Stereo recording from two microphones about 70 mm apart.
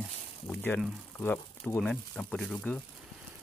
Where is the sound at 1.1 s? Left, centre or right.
Left.